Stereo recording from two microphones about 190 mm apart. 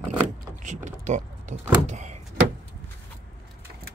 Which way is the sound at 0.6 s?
40° right (ahead or behind).